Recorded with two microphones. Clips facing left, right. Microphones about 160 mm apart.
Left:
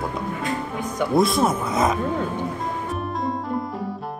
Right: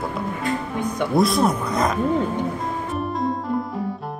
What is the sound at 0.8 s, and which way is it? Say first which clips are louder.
Speech: even; centre (ahead or behind).